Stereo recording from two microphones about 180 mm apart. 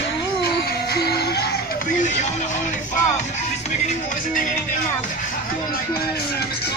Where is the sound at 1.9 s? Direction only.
45° left (ahead or behind).